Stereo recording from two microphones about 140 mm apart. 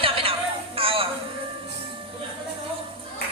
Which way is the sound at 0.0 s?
40° right (ahead or behind).